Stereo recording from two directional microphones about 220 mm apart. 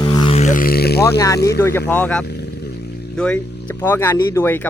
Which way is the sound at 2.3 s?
50° left (ahead or behind).